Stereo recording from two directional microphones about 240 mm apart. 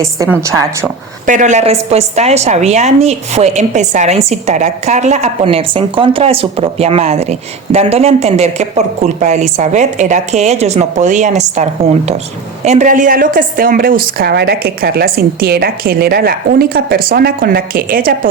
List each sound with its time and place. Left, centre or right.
0.0 s a woman's voice: centre
1.3 s a woman's voice: right